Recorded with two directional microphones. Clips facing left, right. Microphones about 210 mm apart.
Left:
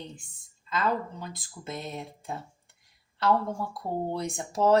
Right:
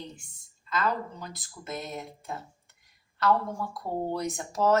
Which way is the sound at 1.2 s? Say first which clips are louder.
Left 2 dB; 30° left (ahead or behind).